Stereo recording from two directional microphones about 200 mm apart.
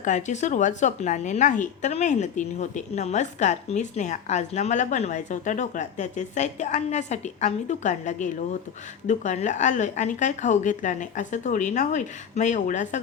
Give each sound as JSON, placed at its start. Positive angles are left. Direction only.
{"t": 0.0, "sound": "a woman's voice", "side_deg": 35}